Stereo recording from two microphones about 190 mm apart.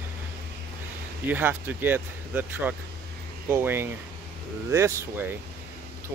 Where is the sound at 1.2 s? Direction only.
10° right (ahead or behind).